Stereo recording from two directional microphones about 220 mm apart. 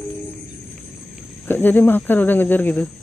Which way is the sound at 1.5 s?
10° left (ahead or behind).